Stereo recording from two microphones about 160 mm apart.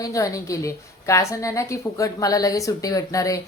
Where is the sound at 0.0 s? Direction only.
20° left (ahead or behind).